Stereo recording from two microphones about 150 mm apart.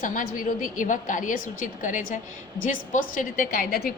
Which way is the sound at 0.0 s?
60° left (ahead or behind).